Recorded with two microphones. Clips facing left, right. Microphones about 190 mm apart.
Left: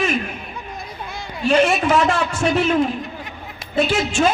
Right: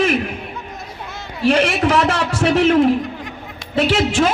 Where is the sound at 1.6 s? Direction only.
85° right.